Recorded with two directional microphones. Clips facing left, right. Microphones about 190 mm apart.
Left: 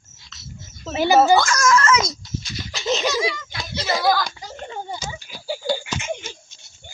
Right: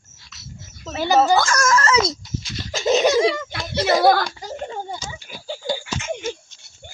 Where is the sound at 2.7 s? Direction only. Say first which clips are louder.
Right 6 dB; 50° right (ahead or behind).